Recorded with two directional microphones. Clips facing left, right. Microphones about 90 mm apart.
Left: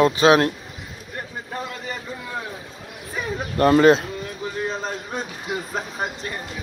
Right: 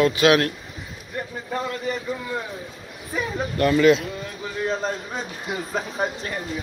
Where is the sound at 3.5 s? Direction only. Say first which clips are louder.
Left 3 dB; 40° left (ahead or behind).